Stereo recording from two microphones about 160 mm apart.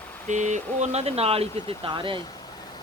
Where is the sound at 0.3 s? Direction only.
50° right (ahead or behind); by 2.2 s 30° right (ahead or behind).